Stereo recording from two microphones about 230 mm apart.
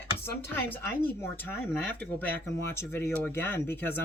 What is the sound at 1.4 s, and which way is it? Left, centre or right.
Speech, centre.